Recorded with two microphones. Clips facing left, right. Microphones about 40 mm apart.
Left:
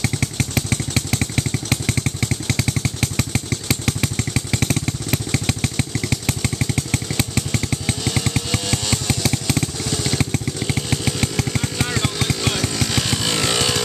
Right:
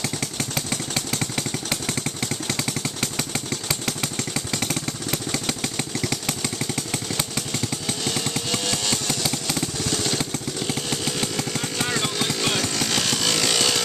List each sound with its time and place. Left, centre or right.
0.0 s motorcycle: left
8.0 s motorcycle: centre
8.9 s a sound: left
9.8 s motorcycle: centre
10.6 s chainsaw: centre